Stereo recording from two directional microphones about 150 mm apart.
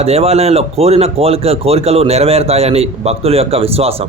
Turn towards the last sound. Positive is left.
turn(degrees=-40)  # may be behind; listen again after turning